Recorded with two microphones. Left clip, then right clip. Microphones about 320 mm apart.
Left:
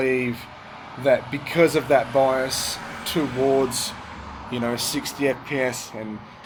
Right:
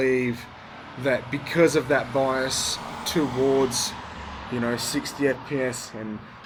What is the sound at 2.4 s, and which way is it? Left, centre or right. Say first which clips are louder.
Speech: even; left.